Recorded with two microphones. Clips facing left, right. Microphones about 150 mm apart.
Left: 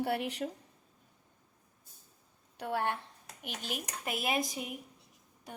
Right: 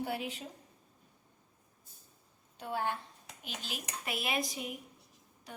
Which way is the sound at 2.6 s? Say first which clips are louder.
Left 2 dB; 65° left (ahead or behind).